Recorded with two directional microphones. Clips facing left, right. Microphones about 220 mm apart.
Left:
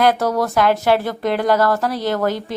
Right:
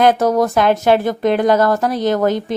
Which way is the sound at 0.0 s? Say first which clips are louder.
Right 4 dB; 20° right (ahead or behind).